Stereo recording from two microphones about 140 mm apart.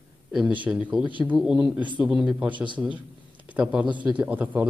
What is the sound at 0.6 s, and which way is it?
Speech, 10° right (ahead or behind).